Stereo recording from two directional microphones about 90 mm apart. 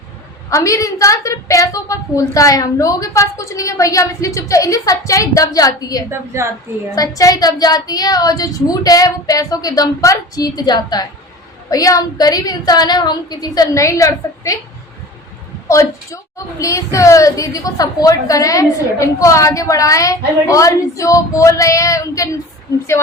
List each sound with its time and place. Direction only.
0.5 s a woman's voice: 35° left (ahead or behind)
6.1 s a woman's voice: 30° right (ahead or behind)
6.9 s child singing: 40° left (ahead or behind)
15.7 s a woman's voice: 35° left (ahead or behind)